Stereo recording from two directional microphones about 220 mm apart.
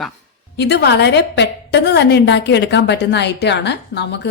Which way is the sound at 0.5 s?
50° left (ahead or behind).